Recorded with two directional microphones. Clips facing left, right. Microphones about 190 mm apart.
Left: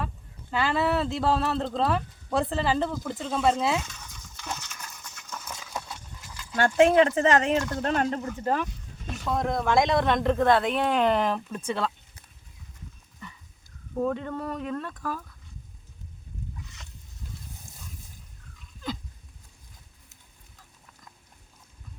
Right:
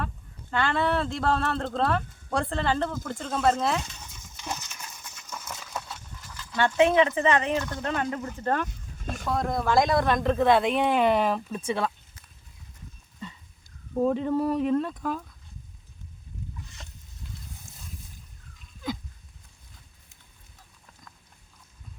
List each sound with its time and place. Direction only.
0.5 s speech: 5° left (ahead or behind)
3.8 s a sound: 25° right (ahead or behind)
4.4 s a sound: 15° right (ahead or behind)
5.5 s horse: 10° left (ahead or behind)
6.6 s speech: 45° left (ahead or behind)
8.4 s speech: centre (ahead or behind)
14.0 s speech: 25° right (ahead or behind)
14.3 s speech: 5° right (ahead or behind)
14.7 s speech: 25° right (ahead or behind)